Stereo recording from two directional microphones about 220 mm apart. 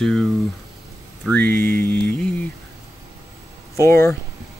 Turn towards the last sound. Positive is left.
turn(degrees=15)  # may be behind; listen again after turning